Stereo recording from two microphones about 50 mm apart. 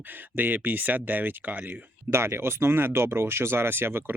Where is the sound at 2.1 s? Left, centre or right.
Right.